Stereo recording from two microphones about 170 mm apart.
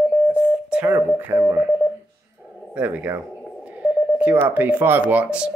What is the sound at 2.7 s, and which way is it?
Speech, 10° right (ahead or behind).